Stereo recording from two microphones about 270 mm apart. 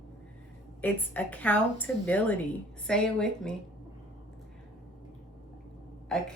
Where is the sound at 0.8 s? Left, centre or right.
Centre.